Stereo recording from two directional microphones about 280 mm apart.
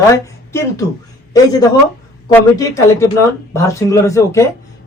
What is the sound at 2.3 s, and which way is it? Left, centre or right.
A man's voice, centre.